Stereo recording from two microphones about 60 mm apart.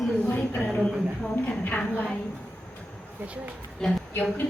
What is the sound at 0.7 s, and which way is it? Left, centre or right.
Speech, centre.